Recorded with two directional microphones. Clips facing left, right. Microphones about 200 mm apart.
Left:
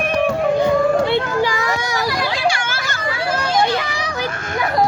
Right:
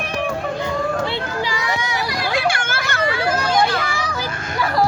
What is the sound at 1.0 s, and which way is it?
Children playing, 55° left (ahead or behind).